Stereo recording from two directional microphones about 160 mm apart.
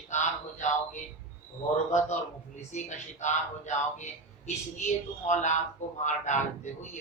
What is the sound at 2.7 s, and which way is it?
Speech, 50° left (ahead or behind).